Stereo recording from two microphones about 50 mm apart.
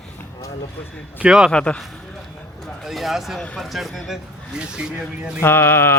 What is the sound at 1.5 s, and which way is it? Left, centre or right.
Speech, left.